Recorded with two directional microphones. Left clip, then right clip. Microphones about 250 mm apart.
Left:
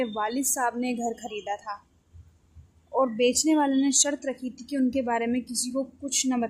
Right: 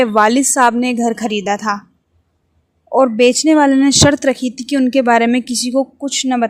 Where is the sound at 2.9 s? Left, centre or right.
Right.